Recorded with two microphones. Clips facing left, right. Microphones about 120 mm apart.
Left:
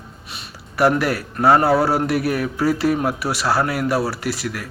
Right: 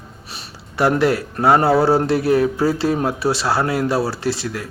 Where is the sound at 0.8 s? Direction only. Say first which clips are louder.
Right 1 dB; 25° right (ahead or behind).